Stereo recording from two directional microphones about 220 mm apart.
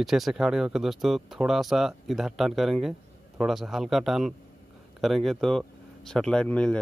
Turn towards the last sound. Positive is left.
turn(degrees=5)  # may be behind; listen again after turning